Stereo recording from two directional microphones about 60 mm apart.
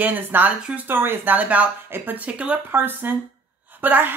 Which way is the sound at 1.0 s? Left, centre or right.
Right.